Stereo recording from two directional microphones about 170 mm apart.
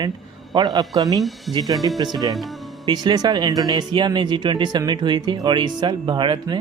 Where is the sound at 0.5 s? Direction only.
25° right (ahead or behind).